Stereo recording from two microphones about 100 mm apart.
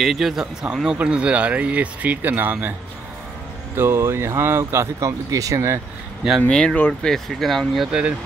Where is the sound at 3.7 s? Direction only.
25° right (ahead or behind).